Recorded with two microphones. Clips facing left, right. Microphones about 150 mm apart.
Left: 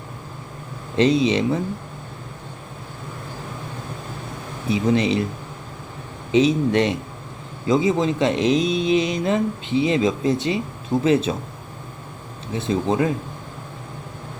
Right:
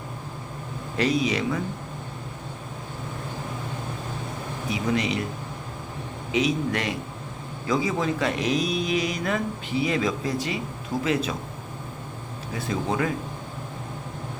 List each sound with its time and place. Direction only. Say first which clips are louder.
0.9 s speech: left 6 dB; 25° left (ahead or behind)
4.7 s speech: left 7 dB; 30° left (ahead or behind)
6.3 s speech: left 7 dB; 30° left (ahead or behind)
12.5 s speech: left 6 dB; 25° left (ahead or behind)